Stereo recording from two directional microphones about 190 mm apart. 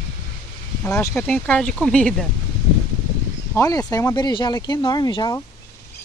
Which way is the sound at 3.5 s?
15° left (ahead or behind).